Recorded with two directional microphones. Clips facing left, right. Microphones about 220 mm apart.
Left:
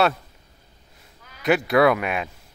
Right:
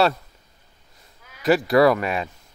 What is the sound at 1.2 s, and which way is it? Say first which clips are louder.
Speech: right 2 dB; centre (ahead or behind).